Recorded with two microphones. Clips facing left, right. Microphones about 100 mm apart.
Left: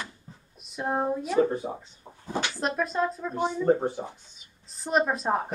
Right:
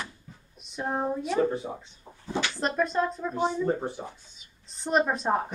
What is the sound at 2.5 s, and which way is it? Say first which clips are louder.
Speech: right 2 dB; centre (ahead or behind).